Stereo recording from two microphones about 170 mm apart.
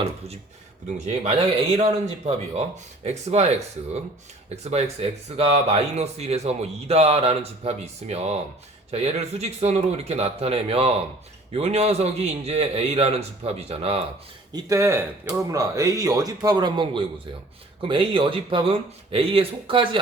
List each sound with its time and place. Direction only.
0.9 s speech: 40° right (ahead or behind)
4.5 s speech: 40° right (ahead or behind)
14.5 s speech: 20° right (ahead or behind)